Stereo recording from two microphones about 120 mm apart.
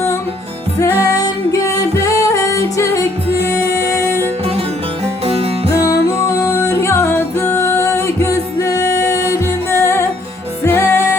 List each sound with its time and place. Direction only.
0.8 s music: 20° left (ahead or behind)
5.0 s music: 55° right (ahead or behind)
5.8 s music: 25° left (ahead or behind)